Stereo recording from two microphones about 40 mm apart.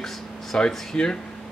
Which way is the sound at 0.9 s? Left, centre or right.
Left.